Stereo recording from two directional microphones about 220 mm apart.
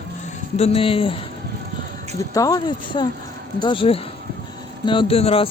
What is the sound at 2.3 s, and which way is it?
Speech, 15° left (ahead or behind).